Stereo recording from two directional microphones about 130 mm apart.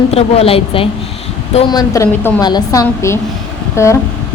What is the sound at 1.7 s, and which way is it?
A woman's voice, 30° left (ahead or behind).